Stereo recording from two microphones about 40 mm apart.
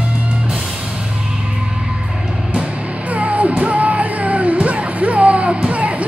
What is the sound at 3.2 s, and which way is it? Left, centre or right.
Music, right.